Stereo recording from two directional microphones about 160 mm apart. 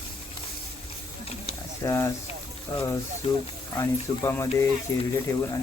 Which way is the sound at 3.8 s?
20° left (ahead or behind).